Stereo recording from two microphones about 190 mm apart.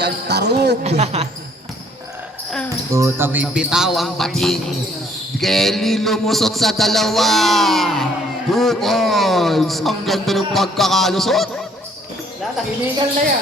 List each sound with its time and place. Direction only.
0.0 s speech: 60° right (ahead or behind)
0.9 s a woman's voice: 35° right (ahead or behind)
2.9 s a man's voice: 15° right (ahead or behind)